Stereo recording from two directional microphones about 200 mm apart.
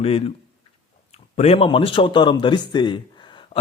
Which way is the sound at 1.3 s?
30° left (ahead or behind).